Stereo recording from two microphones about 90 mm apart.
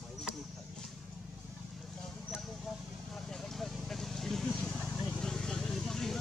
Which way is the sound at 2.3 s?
Centre (ahead or behind).